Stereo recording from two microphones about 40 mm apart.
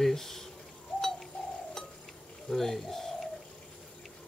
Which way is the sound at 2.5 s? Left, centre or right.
Centre.